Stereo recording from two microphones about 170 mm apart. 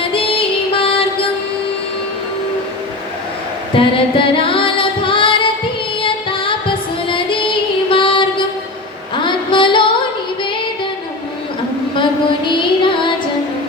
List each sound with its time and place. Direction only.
0.0 s music: 30° left (ahead or behind)
3.8 s female singing: 30° left (ahead or behind)
6.0 s music: 30° left (ahead or behind)
7.1 s female singing: 30° left (ahead or behind)
9.2 s a sound: 30° left (ahead or behind)
12.5 s music: 30° left (ahead or behind)